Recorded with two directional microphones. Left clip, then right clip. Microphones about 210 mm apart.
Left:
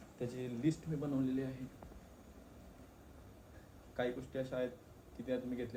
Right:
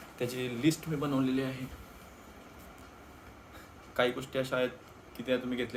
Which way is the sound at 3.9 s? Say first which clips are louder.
Right 9 dB; 10° right (ahead or behind).